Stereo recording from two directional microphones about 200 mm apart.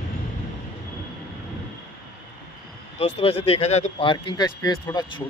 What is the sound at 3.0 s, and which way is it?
Speech, 30° left (ahead or behind).